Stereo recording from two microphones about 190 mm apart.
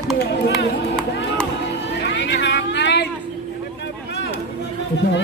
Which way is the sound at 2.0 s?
70° left (ahead or behind).